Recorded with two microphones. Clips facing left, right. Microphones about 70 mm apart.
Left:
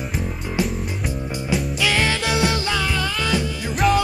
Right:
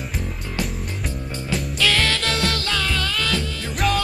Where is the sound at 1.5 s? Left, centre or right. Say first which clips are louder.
Left 1 dB; centre.